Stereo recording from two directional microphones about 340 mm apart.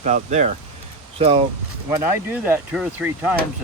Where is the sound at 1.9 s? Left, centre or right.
Centre.